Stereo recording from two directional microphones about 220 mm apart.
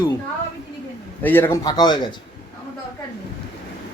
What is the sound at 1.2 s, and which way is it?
Speech, 10° left (ahead or behind).